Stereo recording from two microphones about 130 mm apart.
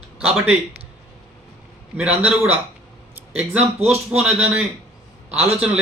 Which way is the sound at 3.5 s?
55° right (ahead or behind).